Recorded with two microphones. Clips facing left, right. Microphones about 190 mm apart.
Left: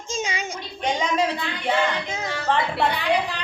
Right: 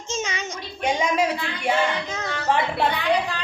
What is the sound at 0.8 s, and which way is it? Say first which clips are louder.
Speech: right 1 dB; 10° right (ahead or behind).